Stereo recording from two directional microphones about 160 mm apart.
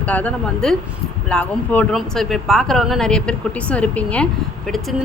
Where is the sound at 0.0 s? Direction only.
10° left (ahead or behind).